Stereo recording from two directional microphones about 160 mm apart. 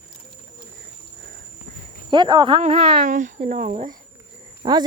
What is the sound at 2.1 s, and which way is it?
Speech, 25° right (ahead or behind).